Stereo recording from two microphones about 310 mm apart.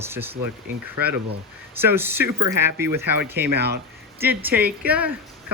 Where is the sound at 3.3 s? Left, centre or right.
Right.